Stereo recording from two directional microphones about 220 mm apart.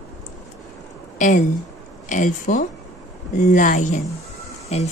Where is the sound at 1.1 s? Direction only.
35° left (ahead or behind).